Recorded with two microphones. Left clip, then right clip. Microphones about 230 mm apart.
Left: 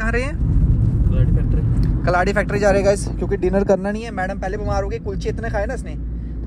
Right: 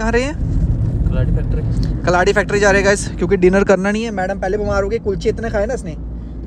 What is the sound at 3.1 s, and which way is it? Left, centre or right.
Speech, right.